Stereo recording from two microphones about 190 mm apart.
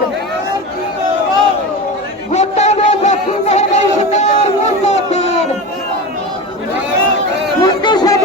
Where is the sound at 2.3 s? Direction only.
35° left (ahead or behind).